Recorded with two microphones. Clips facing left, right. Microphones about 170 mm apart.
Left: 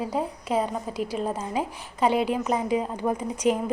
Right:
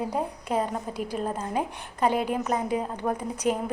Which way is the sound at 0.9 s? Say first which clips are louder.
Left 2 dB; 50° right (ahead or behind).